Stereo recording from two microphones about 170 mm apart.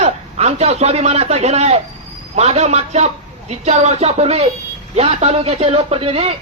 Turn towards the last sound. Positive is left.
turn(degrees=-35)  # may be behind; listen again after turning